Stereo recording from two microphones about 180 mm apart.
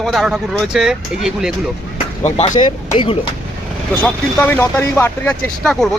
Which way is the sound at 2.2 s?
40° left (ahead or behind).